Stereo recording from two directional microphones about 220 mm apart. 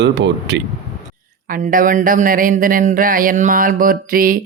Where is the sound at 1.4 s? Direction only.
40° right (ahead or behind).